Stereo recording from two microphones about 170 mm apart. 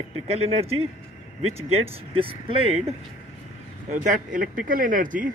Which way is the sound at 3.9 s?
50° right (ahead or behind).